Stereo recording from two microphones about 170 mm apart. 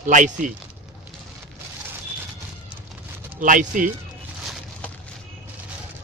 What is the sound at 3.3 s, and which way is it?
Speech, 50° right (ahead or behind).